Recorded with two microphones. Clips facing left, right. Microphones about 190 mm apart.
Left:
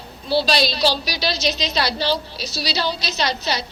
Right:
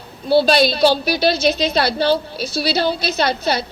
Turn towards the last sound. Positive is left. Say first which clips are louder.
# right 5 dB
turn(degrees=-55)  # may be behind; listen again after turning